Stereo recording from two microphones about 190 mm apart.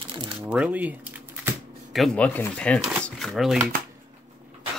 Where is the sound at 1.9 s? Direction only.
5° left (ahead or behind).